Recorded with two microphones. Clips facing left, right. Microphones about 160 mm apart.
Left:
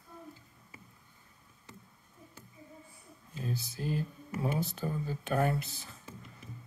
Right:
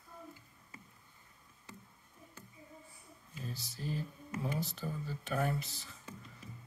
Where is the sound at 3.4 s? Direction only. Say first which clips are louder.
Left 6 dB; 55° left (ahead or behind).